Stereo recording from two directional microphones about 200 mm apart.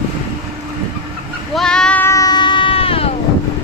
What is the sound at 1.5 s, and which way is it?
Sheep, 5° left (ahead or behind).